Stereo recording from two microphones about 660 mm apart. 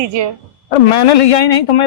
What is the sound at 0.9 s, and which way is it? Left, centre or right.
Speech, left.